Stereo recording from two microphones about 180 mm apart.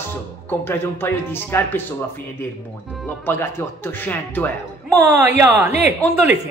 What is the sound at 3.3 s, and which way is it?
Speech, 10° left (ahead or behind).